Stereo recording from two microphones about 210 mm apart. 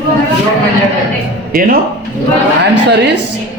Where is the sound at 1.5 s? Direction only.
45° right (ahead or behind).